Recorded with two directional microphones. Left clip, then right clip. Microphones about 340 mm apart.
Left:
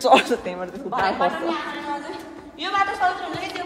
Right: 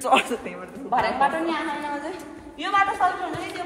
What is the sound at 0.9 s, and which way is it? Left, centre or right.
Speech, centre.